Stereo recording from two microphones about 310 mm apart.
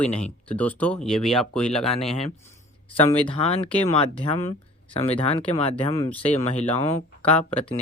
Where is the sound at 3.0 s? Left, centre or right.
Centre.